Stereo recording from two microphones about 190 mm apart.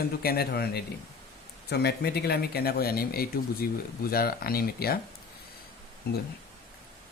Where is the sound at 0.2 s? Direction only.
55° left (ahead or behind).